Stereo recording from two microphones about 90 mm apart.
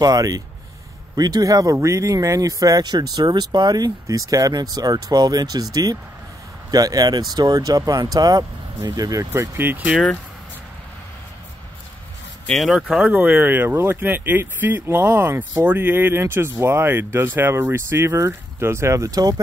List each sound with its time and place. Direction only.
0.0 s speech: 45° right (ahead or behind)
9.6 s speech: 20° right (ahead or behind)
12.5 s speech: centre (ahead or behind)
13.1 s speech: 20° right (ahead or behind); by 19.4 s 45° right (ahead or behind)